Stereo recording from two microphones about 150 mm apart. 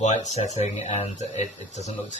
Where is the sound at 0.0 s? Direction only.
50° left (ahead or behind).